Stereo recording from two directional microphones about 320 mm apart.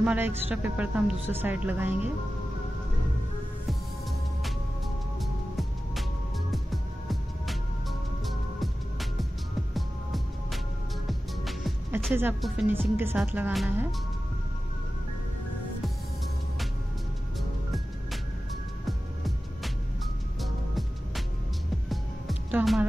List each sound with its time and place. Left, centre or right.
0.0 s a woman's voice: centre
5.2 s music: centre
9.8 s music: centre
11.1 s speech: centre
17.4 s music: centre
22.5 s speech: centre